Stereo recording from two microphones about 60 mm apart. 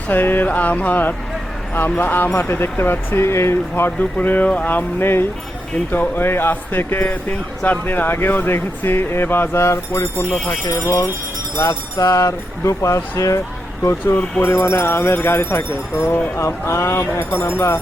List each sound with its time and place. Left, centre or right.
0.1 s speech: left
11.5 s speech: left
11.9 s speech: left
14.4 s speech: left